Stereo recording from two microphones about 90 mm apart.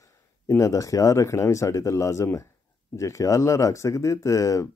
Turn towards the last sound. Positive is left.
turn(degrees=35)  # may be behind; listen again after turning